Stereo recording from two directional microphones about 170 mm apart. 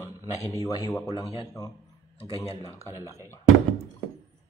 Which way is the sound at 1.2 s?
35° left (ahead or behind).